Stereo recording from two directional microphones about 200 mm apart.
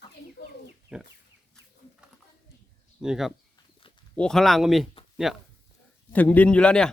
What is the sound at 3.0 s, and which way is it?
Speech, centre (ahead or behind).